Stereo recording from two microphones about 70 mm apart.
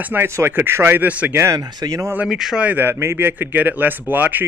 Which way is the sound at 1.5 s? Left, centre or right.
Right.